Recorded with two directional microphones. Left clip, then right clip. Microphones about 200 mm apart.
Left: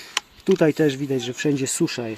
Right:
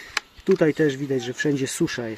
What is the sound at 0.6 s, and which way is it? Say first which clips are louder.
Speech: left 1 dB; 30° left (ahead or behind).